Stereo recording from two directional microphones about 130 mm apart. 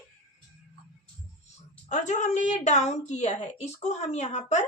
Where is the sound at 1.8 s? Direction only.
65° left (ahead or behind).